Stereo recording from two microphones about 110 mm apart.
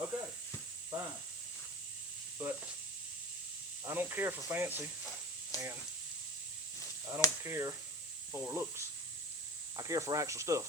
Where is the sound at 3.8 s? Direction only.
20° right (ahead or behind).